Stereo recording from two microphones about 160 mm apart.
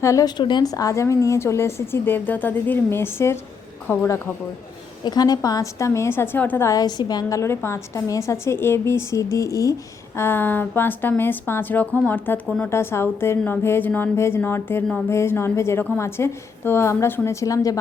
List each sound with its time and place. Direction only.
0.0 s a woman's voice: 20° left (ahead or behind)